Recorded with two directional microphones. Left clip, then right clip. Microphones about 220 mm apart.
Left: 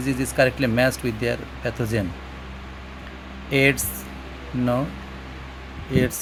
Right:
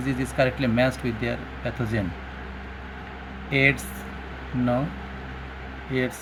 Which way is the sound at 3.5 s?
30° left (ahead or behind).